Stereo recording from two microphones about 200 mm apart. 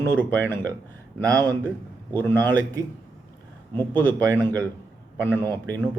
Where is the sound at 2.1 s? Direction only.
10° left (ahead or behind).